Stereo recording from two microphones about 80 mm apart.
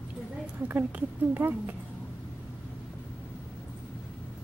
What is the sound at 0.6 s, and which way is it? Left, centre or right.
Speech, right.